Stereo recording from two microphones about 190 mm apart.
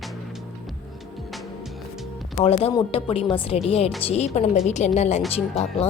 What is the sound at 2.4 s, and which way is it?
A woman's voice, 30° left (ahead or behind).